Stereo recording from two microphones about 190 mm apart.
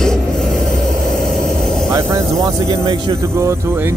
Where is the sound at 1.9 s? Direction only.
15° right (ahead or behind).